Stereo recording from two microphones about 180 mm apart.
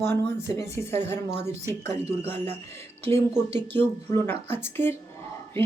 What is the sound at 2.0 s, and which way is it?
Speech, 15° left (ahead or behind).